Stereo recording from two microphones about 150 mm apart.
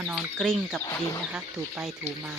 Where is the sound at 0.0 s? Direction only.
10° right (ahead or behind).